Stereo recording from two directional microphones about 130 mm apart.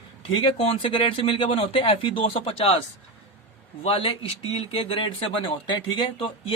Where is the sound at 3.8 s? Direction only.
45° left (ahead or behind).